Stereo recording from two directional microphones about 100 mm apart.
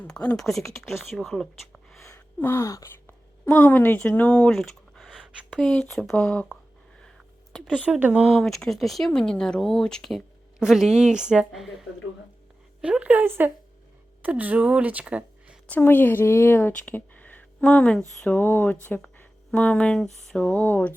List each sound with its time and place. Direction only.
0.0 s speech: 15° left (ahead or behind)
2.0 s a sound: 25° left (ahead or behind)
3.1 s speech: 20° left (ahead or behind)
7.6 s speech: 10° right (ahead or behind)
8.4 s speech: 5° left (ahead or behind)
12.8 s speech: 10° right (ahead or behind)
15.8 s a woman's voice: 20° left (ahead or behind)
20.7 s a sound: 20° left (ahead or behind)